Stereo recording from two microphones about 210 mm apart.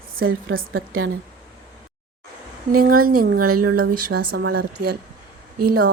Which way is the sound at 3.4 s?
90° right.